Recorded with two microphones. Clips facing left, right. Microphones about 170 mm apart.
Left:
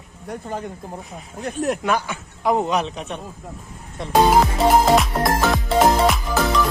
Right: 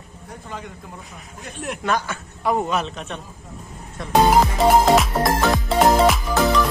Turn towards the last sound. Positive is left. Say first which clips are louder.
# right 2 dB
turn(degrees=0)  # may be behind; listen again after turning